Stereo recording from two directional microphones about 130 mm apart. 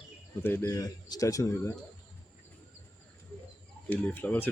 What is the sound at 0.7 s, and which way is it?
A man's voice, 30° left (ahead or behind).